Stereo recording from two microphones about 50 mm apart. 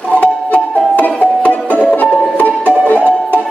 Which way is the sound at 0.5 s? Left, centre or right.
Left.